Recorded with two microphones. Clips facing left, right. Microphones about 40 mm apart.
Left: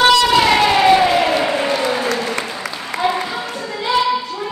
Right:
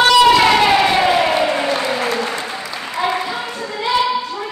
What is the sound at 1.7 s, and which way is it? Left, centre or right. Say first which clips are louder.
Applause: left 1 dB; centre.